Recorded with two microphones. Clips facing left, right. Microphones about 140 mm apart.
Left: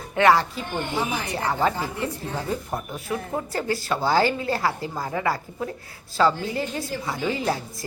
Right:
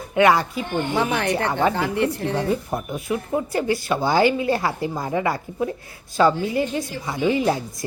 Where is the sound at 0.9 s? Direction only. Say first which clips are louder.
Right 7 dB; 70° right (ahead or behind).